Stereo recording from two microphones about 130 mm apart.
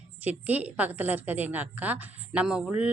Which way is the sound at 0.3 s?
10° right (ahead or behind).